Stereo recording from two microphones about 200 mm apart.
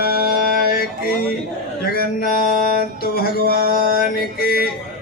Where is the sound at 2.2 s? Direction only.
50° left (ahead or behind).